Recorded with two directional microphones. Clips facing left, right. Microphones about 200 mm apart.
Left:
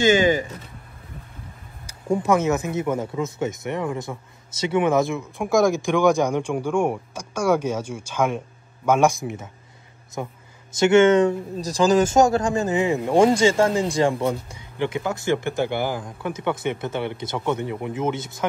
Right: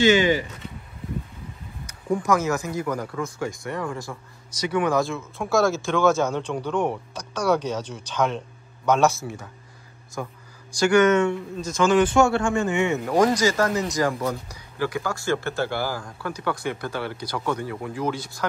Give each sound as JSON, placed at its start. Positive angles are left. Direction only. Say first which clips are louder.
{"t": 0.0, "sound": "speech", "louder": "left 1 dB", "side_deg": 45}
{"t": 1.9, "sound": "speech", "louder": "left 2 dB", "side_deg": 25}